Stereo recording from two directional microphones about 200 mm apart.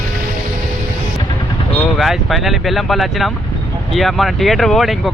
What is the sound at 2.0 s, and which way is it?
Speech, centre (ahead or behind).